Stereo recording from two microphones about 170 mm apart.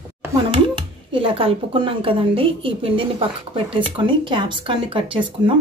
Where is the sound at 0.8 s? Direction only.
30° right (ahead or behind).